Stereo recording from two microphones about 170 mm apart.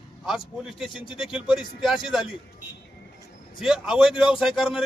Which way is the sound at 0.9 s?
30° left (ahead or behind).